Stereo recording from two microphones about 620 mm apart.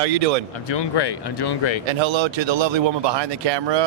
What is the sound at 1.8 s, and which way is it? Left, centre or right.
Speech, right.